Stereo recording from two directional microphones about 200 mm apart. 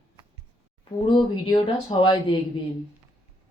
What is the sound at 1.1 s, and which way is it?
Speech, 25° left (ahead or behind).